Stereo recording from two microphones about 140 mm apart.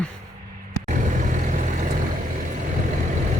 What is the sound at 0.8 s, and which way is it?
Vehicle, 65° right (ahead or behind).